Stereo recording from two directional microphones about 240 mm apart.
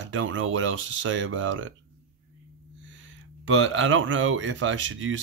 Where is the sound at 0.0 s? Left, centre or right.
Right.